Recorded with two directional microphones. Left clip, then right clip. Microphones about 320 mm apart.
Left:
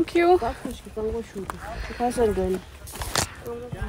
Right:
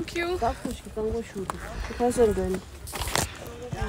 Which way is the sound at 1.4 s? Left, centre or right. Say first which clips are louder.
Left 1 dB; centre.